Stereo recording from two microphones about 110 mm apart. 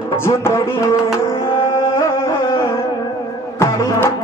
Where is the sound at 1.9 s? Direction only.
25° left (ahead or behind).